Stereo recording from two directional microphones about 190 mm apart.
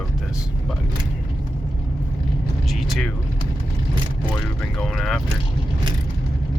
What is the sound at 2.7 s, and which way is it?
Vehicle, centre (ahead or behind).